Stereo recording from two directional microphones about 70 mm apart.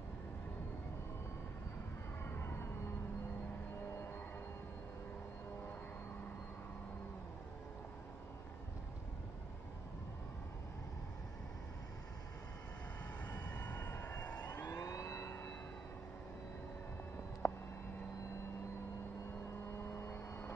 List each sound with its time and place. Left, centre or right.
2.2 s music: left
13.3 s vehicle: left
14.4 s vehicle: left
17.4 s a sound: left
19.8 s vehicle: left